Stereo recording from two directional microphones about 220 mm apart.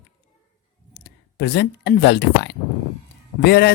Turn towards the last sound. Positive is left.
turn(degrees=50)  # may be behind; listen again after turning